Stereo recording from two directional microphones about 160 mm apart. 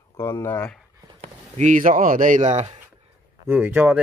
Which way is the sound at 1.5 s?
55° right (ahead or behind).